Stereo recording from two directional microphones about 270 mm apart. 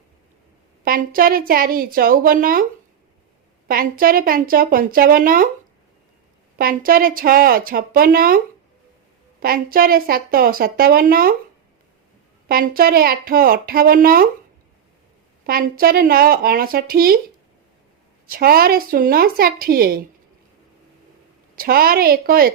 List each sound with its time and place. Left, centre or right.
0.9 s a woman's voice: right
3.7 s a woman's voice: right
6.6 s a woman's voice: right
9.4 s a woman's voice: right
12.5 s a woman's voice: right
15.5 s a woman's voice: right
18.3 s a woman's voice: right
21.5 s a woman's voice: right